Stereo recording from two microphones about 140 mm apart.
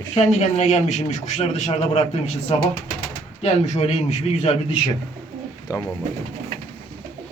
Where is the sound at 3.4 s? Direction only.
50° left (ahead or behind).